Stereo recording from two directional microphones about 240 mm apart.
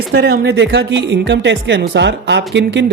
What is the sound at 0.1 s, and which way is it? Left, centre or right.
Speech, right.